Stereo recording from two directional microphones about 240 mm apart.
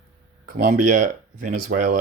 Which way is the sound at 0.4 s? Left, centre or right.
Right.